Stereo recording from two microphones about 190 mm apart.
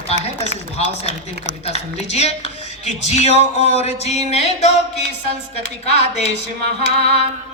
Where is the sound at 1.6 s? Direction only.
35° left (ahead or behind).